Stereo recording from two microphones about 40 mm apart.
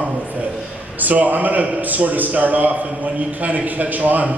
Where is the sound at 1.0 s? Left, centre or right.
Right.